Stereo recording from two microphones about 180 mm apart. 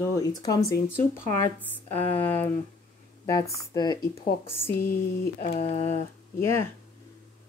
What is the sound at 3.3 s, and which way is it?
Speech, 20° left (ahead or behind).